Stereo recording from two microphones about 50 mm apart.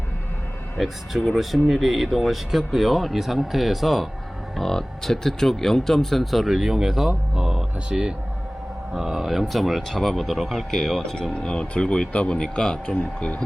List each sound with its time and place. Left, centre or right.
0.8 s speech: centre
7.9 s speech: centre
13.0 s speech: left